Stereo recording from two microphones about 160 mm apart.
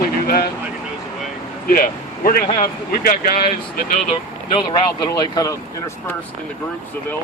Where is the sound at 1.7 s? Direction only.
60° left (ahead or behind).